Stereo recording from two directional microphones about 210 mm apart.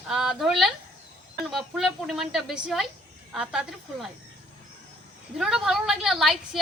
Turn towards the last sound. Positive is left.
turn(degrees=0)  # may be behind; listen again after turning